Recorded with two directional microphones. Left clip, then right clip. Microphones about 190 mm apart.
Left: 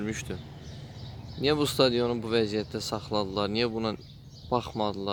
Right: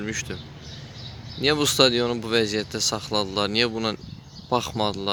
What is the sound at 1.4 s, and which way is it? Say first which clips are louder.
Speech: right 5 dB; 5° left (ahead or behind).